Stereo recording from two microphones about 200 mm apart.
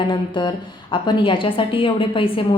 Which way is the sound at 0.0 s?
25° left (ahead or behind).